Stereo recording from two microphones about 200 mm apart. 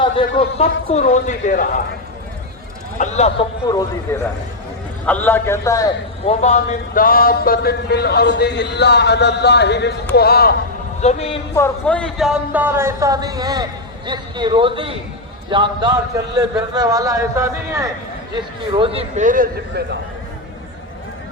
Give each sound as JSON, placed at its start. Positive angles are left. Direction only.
{"t": 0.0, "sound": "a man's voice", "side_deg": 25}
{"t": 3.0, "sound": "a man's voice", "side_deg": 35}
{"t": 3.7, "sound": "a man's voice", "side_deg": 20}
{"t": 6.2, "sound": "speech", "side_deg": 35}
{"t": 11.0, "sound": "a man's voice", "side_deg": 30}
{"t": 11.5, "sound": "a man's voice", "side_deg": 10}